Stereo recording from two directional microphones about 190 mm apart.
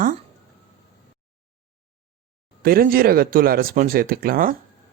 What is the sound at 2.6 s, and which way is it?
Speech, 50° right (ahead or behind).